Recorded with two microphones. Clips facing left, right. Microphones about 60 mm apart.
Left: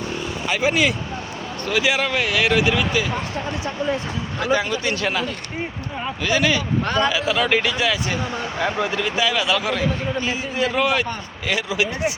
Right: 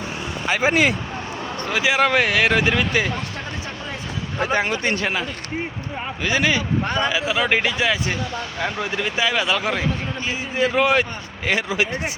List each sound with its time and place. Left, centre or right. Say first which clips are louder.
0.4 s speech: right 1 dB; right
1.7 s speech: left 1 dB; right
2.0 s speech: right 3 dB; right
4.4 s speech: even; right
5.0 s speech: left 1 dB; centre
6.9 s speech: left 3 dB; centre
8.5 s speech: left 3 dB; left
8.8 s speech: even; right
11.4 s speech: right 1 dB; right